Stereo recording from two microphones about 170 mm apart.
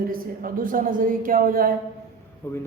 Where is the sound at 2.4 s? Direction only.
15° left (ahead or behind).